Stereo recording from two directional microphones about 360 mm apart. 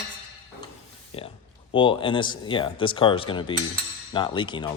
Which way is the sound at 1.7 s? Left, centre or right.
Centre.